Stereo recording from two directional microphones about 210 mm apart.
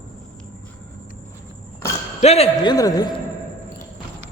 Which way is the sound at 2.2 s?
30° left (ahead or behind).